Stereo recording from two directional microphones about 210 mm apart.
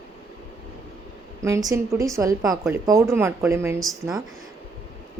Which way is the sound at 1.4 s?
15° right (ahead or behind).